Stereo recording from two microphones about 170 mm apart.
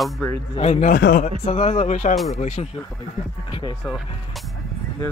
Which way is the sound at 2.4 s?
45° left (ahead or behind).